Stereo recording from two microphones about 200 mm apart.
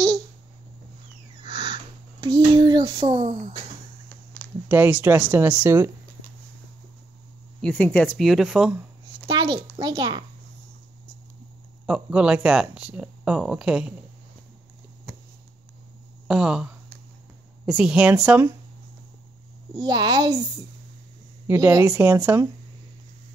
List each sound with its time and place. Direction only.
1.4 s a sound: 20° right (ahead or behind)
4.6 s speech: 10° right (ahead or behind)
7.6 s speech: 10° left (ahead or behind)
9.3 s a child's voice: 25° right (ahead or behind)
11.8 s speech: 5° right (ahead or behind)
16.3 s speech: 5° right (ahead or behind)
19.7 s a child's voice: 20° right (ahead or behind)
21.5 s speech: 15° right (ahead or behind)